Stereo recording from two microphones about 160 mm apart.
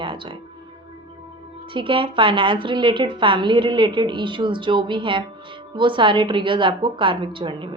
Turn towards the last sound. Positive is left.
turn(degrees=-30)  # may be behind; listen again after turning